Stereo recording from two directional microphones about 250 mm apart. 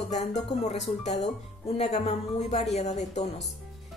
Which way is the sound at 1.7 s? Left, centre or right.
Left.